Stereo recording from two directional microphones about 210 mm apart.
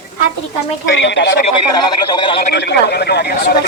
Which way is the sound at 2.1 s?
25° left (ahead or behind).